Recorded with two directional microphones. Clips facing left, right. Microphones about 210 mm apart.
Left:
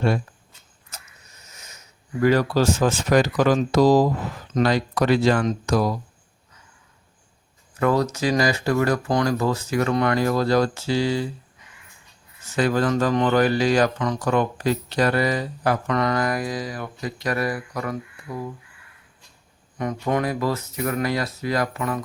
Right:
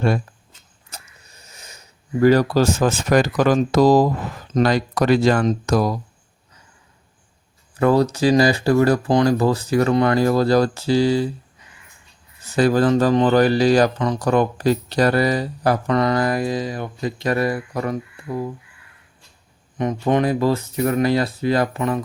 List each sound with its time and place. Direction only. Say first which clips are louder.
0.9 s a sound: right 3 dB; 30° right (ahead or behind)
2.2 s speech: right 4 dB; 35° right (ahead or behind)
7.8 s speech: right 5 dB; 30° right (ahead or behind)
12.5 s speech: right 5 dB; 35° right (ahead or behind)
19.8 s speech: right 5 dB; 25° right (ahead or behind)